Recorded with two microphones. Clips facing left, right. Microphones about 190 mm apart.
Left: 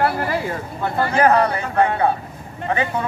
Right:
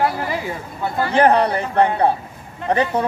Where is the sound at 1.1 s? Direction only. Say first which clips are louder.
Right 2 dB; 30° right (ahead or behind).